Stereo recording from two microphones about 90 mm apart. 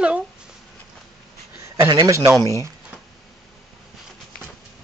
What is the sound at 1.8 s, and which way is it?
Speech, 55° right (ahead or behind).